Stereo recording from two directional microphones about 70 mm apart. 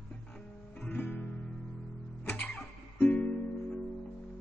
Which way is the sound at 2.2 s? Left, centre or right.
Centre.